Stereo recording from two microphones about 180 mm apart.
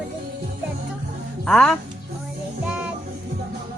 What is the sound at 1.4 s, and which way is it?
Speech, 5° left (ahead or behind).